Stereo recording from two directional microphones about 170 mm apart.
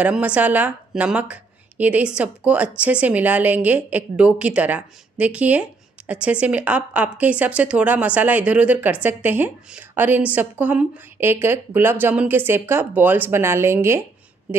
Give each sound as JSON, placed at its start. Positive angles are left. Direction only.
{"t": 0.0, "sound": "a woman's voice", "side_deg": -5}